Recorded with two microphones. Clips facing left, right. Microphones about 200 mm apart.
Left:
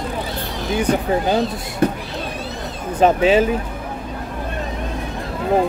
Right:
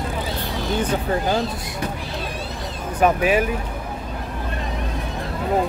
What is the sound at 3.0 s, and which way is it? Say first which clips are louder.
Speech: left 4 dB; 25° left (ahead or behind).